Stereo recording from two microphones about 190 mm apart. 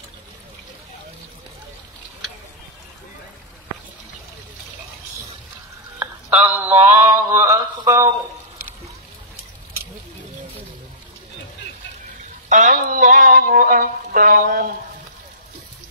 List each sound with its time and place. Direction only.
6.4 s mantra: 30° right (ahead or behind)
7.0 s mantra: 15° right (ahead or behind)
12.4 s a sound: 40° right (ahead or behind)